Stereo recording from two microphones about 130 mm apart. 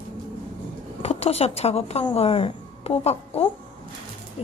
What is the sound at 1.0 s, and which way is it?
A woman's voice, 50° left (ahead or behind).